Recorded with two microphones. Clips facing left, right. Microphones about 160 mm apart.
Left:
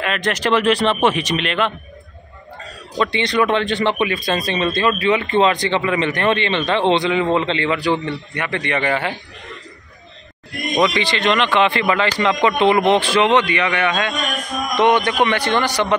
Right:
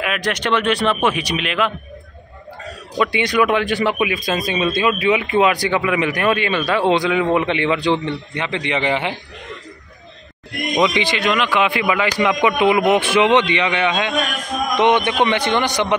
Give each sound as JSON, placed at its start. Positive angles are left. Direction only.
{"t": 0.0, "sound": "speech", "side_deg": -5}
{"t": 0.7, "sound": "speech", "side_deg": 30}
{"t": 1.1, "sound": "speech", "side_deg": -5}
{"t": 3.0, "sound": "speech", "side_deg": -10}
{"t": 10.8, "sound": "speech", "side_deg": -15}